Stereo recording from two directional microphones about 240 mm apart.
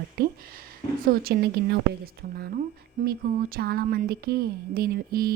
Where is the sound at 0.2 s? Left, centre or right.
Right.